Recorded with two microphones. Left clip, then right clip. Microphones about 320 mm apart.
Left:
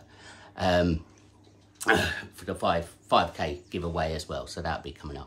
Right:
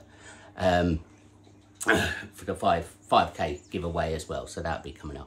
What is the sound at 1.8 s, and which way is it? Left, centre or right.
Speech, centre.